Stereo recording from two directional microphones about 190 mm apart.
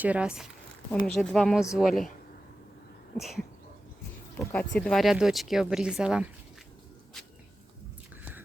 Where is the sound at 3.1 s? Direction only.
Centre (ahead or behind).